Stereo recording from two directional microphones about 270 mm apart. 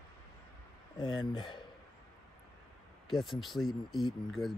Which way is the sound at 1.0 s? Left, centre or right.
Centre.